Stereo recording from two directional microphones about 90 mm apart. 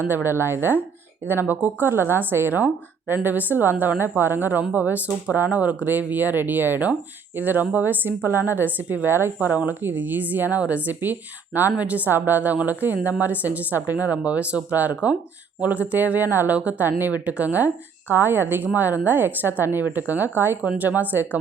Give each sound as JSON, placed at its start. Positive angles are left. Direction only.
{"t": 0.0, "sound": "a woman's voice", "side_deg": -25}